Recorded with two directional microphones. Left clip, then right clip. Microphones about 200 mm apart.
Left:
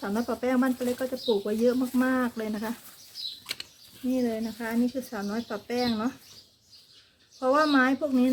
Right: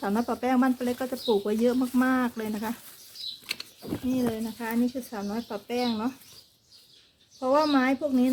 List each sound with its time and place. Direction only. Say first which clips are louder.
0.0 s speech: right 1 dB; 15° right (ahead or behind)
3.4 s a sound: right 1 dB; 5° left (ahead or behind)
4.1 s speech: left 2 dB; 10° right (ahead or behind)
7.3 s speech: left 1 dB; 5° right (ahead or behind)